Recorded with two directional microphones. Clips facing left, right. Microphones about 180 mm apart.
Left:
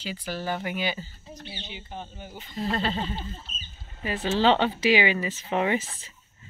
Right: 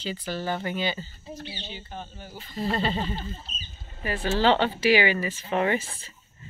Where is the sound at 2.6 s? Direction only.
5° right (ahead or behind).